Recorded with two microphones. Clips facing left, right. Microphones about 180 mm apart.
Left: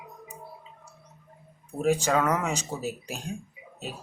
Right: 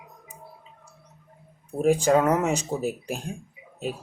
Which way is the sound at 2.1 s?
35° right (ahead or behind).